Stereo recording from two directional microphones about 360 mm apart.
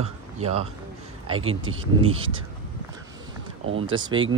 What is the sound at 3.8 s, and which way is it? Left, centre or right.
Speech, centre.